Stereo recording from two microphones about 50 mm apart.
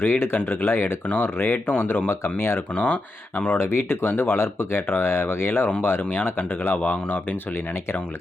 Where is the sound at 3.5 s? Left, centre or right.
Left.